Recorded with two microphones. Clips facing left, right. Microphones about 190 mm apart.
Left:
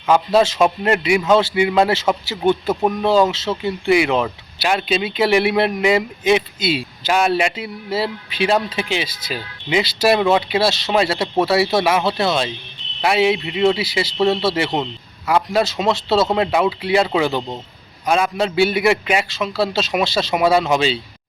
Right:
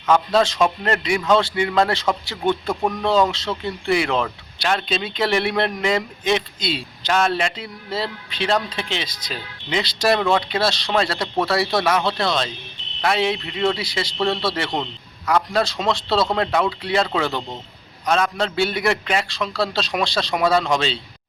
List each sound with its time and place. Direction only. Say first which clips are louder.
0.0 s a man's voice: left 3 dB; 10° left (ahead or behind)
14.2 s speech: left 5 dB; 25° left (ahead or behind)
14.5 s a man's voice: left 4 dB; 5° left (ahead or behind)